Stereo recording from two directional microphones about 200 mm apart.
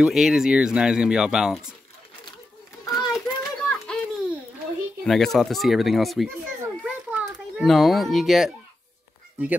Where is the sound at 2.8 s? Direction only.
20° left (ahead or behind).